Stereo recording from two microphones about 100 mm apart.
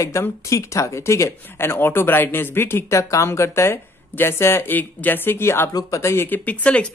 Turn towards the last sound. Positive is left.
turn(degrees=15)  # may be behind; listen again after turning